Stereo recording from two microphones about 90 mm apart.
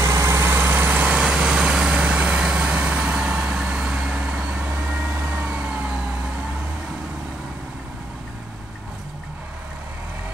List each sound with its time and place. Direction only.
0.0 s vehicle: 35° right (ahead or behind); by 5.6 s 15° right (ahead or behind)